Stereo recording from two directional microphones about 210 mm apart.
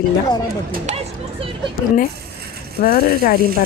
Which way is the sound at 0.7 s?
35° right (ahead or behind).